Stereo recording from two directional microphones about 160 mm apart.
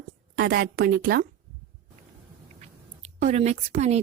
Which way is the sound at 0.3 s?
80° right.